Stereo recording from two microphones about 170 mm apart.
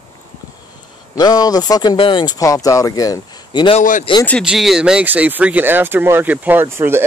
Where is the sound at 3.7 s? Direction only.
50° left (ahead or behind).